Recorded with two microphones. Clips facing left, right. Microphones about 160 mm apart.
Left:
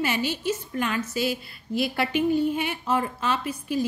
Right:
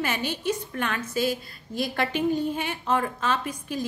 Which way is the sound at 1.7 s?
5° left (ahead or behind).